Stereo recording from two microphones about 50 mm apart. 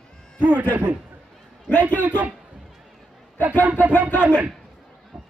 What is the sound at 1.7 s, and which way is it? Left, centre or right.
Speech, left.